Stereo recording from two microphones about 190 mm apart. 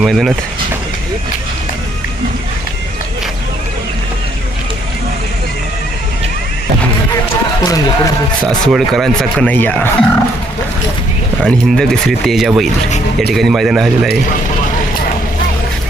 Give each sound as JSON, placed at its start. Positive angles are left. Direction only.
{"t": 0.0, "sound": "speech", "side_deg": 0}
{"t": 7.6, "sound": "a man's voice", "side_deg": 20}
{"t": 8.6, "sound": "speech", "side_deg": 0}
{"t": 11.4, "sound": "speech", "side_deg": 5}